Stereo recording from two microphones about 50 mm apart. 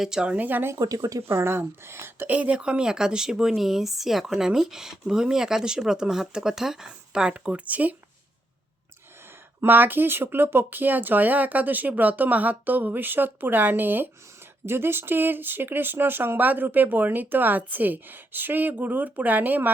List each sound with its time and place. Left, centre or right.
0.0 s speech: centre
0.3 s speech: right
1.3 s speech: right
2.2 s speech: right
9.6 s speech: right
14.7 s speech: right